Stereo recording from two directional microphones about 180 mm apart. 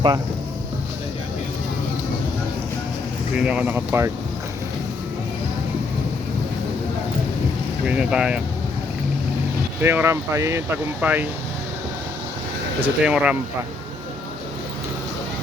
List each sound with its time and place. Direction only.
3.3 s speech: 5° right (ahead or behind)
7.9 s speech: 5° right (ahead or behind)
9.8 s speech: 15° right (ahead or behind)
12.8 s speech: 5° right (ahead or behind)